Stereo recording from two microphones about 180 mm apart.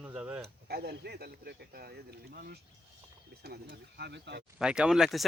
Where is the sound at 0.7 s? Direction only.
60° right (ahead or behind).